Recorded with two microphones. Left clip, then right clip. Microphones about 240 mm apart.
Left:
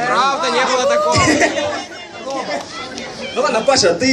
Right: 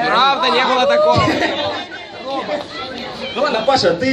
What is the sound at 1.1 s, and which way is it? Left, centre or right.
Speech, left.